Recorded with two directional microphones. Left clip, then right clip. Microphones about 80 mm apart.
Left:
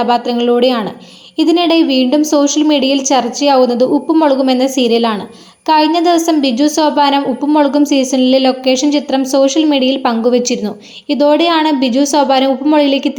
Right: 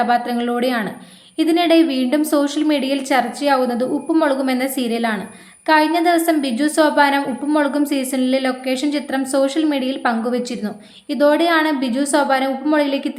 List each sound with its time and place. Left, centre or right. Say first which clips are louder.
0.0 s a woman's voice: left 5 dB; left
2.6 s a woman's voice: left 7 dB; left